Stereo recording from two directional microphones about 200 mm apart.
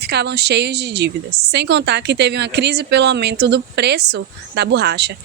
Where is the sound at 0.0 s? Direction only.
55° right (ahead or behind).